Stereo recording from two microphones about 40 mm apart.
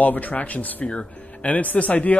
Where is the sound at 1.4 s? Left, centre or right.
Left.